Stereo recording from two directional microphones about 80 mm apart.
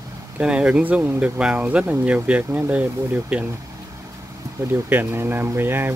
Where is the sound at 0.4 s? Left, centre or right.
Centre.